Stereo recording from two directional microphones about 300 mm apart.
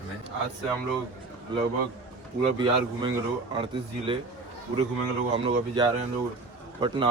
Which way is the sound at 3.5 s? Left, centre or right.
Centre.